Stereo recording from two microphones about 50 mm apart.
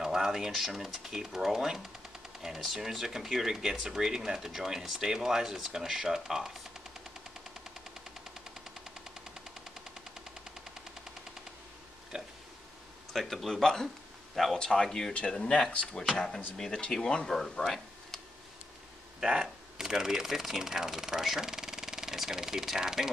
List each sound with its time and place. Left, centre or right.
0.0 s speech: centre
12.1 s a sound: centre
13.1 s speech: centre; by 16.1 s left
16.5 s speech: centre
17.4 s a sound: centre
19.2 s speech: centre